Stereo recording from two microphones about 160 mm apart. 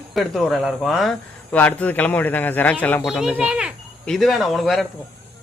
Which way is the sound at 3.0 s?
Centre (ahead or behind).